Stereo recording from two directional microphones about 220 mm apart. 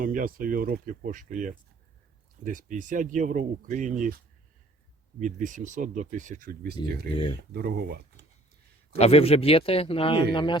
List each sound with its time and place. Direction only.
0.0 s speech: 40° right (ahead or behind)
5.2 s speech: 35° right (ahead or behind)
8.9 s a man's voice: 30° left (ahead or behind)